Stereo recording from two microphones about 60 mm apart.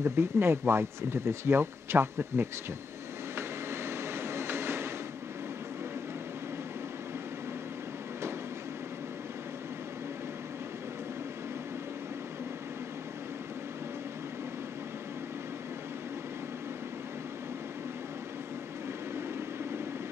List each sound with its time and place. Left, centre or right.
0.0 s speech: right
3.3 s vehicle: right